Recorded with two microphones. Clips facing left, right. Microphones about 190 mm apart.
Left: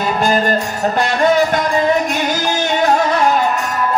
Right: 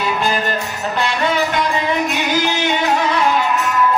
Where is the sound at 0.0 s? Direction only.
45° left (ahead or behind).